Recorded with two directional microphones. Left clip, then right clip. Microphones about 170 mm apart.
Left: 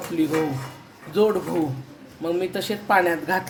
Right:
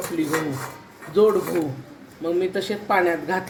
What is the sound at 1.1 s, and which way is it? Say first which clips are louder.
Speech: right 3 dB; 60° left (ahead or behind).